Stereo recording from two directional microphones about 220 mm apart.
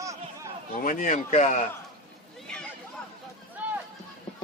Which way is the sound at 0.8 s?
35° left (ahead or behind).